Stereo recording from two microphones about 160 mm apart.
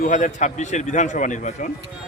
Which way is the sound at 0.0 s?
50° left (ahead or behind).